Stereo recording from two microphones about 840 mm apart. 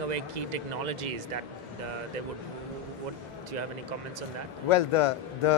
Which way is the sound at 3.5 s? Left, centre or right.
Right.